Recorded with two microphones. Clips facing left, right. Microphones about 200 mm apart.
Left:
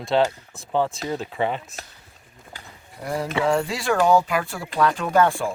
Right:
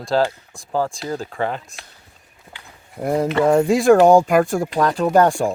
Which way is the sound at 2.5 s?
40° left (ahead or behind).